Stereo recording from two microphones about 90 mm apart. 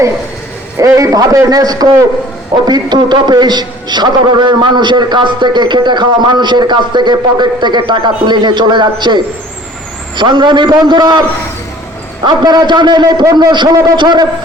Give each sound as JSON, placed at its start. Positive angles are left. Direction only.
{"t": 0.8, "sound": "a man's voice", "side_deg": -35}
{"t": 2.6, "sound": "a man's voice", "side_deg": -55}
{"t": 12.2, "sound": "a man's voice", "side_deg": -50}